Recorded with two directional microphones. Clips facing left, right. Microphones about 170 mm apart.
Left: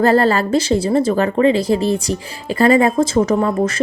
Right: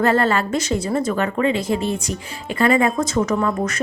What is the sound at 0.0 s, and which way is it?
A woman's voice, 35° left (ahead or behind).